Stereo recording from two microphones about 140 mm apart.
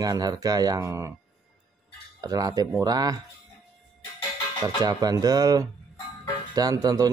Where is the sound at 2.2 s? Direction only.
25° right (ahead or behind).